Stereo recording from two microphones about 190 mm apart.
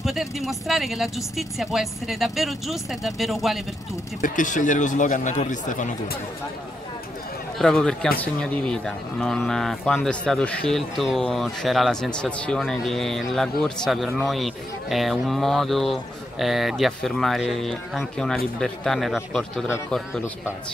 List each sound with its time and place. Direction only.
0.0 s speech: centre (ahead or behind)
4.2 s speech: 40° left (ahead or behind)
7.5 s speech: centre (ahead or behind)